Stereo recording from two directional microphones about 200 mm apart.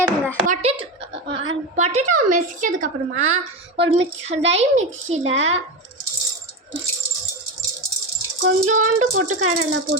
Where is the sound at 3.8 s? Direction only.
65° right (ahead or behind).